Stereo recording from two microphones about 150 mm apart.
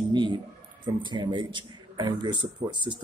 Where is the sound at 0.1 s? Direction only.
30° right (ahead or behind).